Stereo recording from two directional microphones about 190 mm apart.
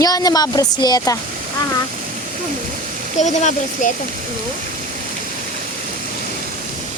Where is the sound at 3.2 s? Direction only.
40° left (ahead or behind).